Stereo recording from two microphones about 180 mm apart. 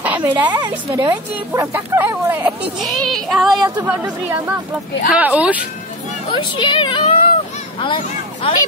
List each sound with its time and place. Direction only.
0.0 s a sound: 10° right (ahead or behind)
0.7 s speech: 15° right (ahead or behind)
2.8 s child singing: centre (ahead or behind)
3.8 s speech: 10° right (ahead or behind)
6.5 s speech: 25° left (ahead or behind)